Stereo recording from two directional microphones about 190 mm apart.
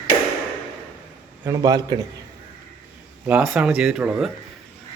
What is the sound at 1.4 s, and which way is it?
Speech, 15° right (ahead or behind).